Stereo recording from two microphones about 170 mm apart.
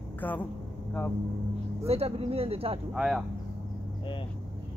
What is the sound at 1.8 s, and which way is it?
Speech, 35° right (ahead or behind).